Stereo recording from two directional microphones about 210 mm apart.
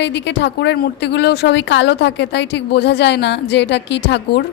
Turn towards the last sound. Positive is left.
turn(degrees=55)  # may be behind; listen again after turning